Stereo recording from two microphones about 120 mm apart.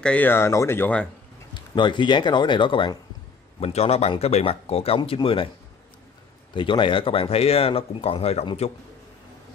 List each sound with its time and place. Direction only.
0.0 s speech: 15° left (ahead or behind)
1.5 s speech: 40° left (ahead or behind)
3.5 s speech: 55° left (ahead or behind)
6.5 s speech: 45° left (ahead or behind); by 8.5 s 60° left (ahead or behind)